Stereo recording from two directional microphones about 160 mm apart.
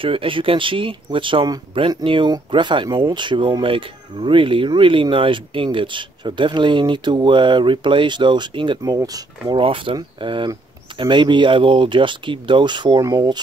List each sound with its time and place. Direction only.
0.0 s speech: 35° right (ahead or behind)